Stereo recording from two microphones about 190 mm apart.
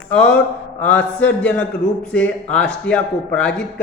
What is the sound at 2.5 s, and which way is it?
Speech, 5° left (ahead or behind).